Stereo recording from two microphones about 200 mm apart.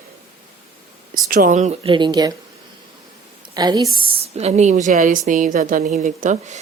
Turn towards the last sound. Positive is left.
turn(degrees=-35)  # may be behind; listen again after turning